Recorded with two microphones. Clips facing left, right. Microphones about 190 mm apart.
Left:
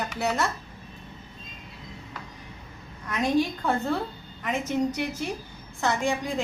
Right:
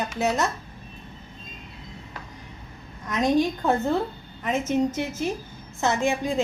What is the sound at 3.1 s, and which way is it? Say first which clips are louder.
A woman's voice: right 3 dB; 20° right (ahead or behind).